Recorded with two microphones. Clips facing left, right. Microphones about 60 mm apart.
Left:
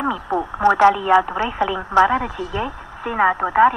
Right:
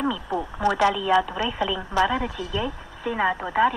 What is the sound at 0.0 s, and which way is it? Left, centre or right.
Speech, left.